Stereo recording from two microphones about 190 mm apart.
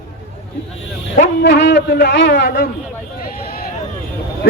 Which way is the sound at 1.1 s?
65° left (ahead or behind).